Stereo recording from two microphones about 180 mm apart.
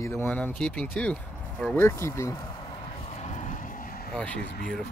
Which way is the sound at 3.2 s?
45° left (ahead or behind).